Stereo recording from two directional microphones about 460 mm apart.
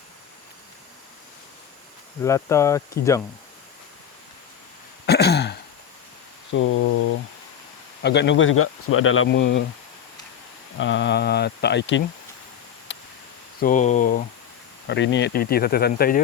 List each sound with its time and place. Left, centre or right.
2.2 s speech: centre
5.0 s throat clearing: left
6.5 s a sound: left
8.0 s speech: left
10.8 s speech: left
12.9 s a sound: left
13.6 s speech: centre